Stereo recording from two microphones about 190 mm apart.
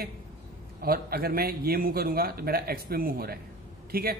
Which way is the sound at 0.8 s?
50° right (ahead or behind).